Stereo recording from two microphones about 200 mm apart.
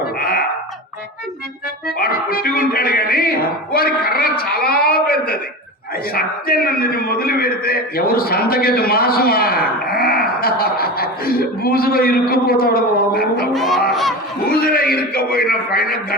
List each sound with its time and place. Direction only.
0.2 s a sound: 50° left (ahead or behind)
2.0 s music: 50° left (ahead or behind)
6.1 s a man's voice: 50° left (ahead or behind)
13.5 s speech: centre (ahead or behind)
14.5 s a man's voice: 50° left (ahead or behind)